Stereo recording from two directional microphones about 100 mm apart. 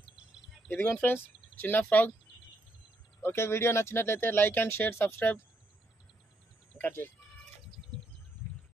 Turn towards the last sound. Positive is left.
turn(degrees=20)  # may be behind; listen again after turning